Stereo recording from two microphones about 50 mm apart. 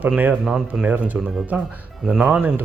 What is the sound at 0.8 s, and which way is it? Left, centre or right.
Speech, right.